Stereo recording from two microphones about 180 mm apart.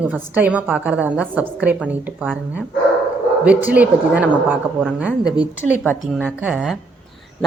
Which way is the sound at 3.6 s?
10° right (ahead or behind).